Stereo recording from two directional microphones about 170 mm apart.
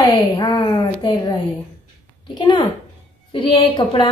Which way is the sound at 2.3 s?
25° left (ahead or behind).